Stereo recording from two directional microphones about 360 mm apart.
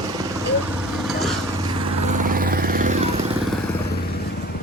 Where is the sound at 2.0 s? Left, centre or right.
Right.